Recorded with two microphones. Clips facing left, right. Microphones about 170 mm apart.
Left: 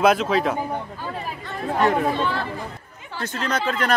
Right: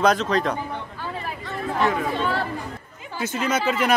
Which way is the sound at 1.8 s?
55° left (ahead or behind).